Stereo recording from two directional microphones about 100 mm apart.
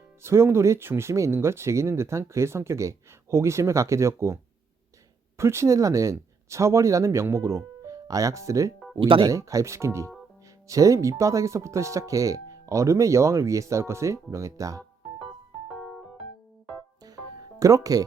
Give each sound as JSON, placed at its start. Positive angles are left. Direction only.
{"t": 0.2, "sound": "speech", "side_deg": -25}
{"t": 5.4, "sound": "speech", "side_deg": -30}
{"t": 9.0, "sound": "speech", "side_deg": -60}
{"t": 9.2, "sound": "speech", "side_deg": -35}
{"t": 15.7, "sound": "music", "side_deg": 5}
{"t": 17.6, "sound": "speech", "side_deg": -35}